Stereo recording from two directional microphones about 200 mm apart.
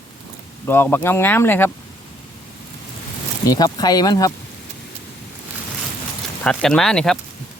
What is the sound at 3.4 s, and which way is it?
Speech, 20° left (ahead or behind).